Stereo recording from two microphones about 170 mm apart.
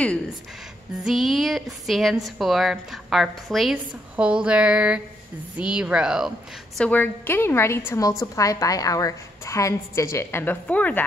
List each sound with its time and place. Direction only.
0.0 s a woman's voice: 5° left (ahead or behind)
6.8 s a woman's voice: 10° left (ahead or behind)